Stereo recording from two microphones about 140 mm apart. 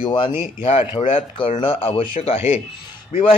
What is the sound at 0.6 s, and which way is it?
Speech, 50° left (ahead or behind).